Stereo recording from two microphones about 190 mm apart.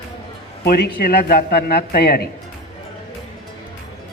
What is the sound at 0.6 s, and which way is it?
A man's voice, 55° left (ahead or behind).